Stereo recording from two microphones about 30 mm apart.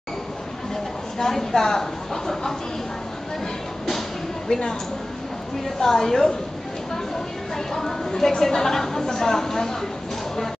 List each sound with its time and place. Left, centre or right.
1.1 s a woman's voice: centre
4.5 s a woman's voice: left
5.8 s a woman's voice: centre
7.5 s a woman's voice: centre